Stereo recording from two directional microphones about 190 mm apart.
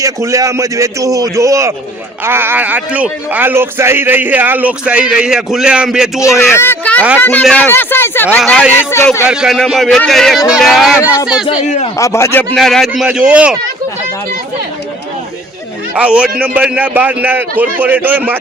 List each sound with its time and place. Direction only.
0.0 s speech: 15° right (ahead or behind)
6.5 s speech: 10° left (ahead or behind)
9.2 s speech: 5° right (ahead or behind)
11.4 s speech: 35° left (ahead or behind)
11.9 s speech: 15° left (ahead or behind); by 13.6 s 5° right (ahead or behind)
16.0 s speech: 5° right (ahead or behind)